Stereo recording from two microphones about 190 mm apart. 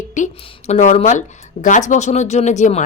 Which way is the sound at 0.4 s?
40° left (ahead or behind).